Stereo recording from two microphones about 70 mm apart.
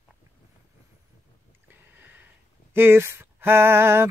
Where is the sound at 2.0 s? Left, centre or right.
Right.